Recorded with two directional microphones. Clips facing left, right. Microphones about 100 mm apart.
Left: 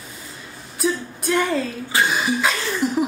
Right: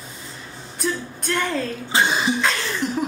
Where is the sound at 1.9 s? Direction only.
25° right (ahead or behind).